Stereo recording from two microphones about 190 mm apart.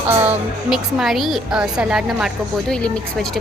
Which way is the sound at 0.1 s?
10° right (ahead or behind).